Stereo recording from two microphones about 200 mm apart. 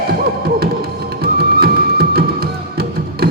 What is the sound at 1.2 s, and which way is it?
Music, 50° right (ahead or behind).